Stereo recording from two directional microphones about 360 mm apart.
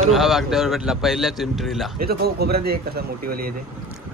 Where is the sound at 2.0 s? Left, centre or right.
Right.